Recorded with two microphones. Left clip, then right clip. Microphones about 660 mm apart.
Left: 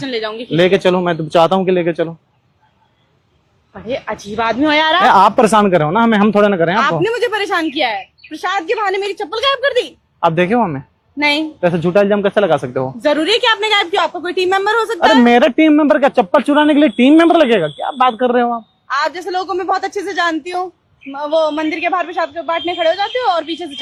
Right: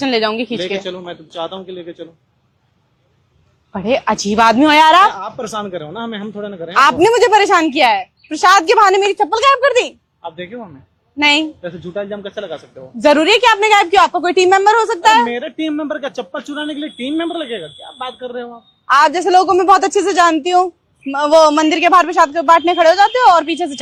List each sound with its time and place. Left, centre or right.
0.0 s a woman's voice: right
0.6 s a man's voice: left
3.7 s a woman's voice: right
5.1 s speech: left
6.7 s a woman's voice: right
10.2 s a man's voice: left
11.2 s a woman's voice: right
11.6 s speech: left
13.0 s a woman's voice: right
15.3 s speech: left
18.9 s a woman's voice: right